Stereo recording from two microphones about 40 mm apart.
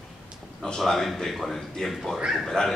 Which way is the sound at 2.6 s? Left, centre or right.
Left.